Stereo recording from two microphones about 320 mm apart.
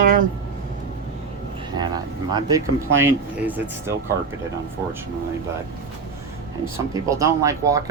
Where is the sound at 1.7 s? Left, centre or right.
Centre.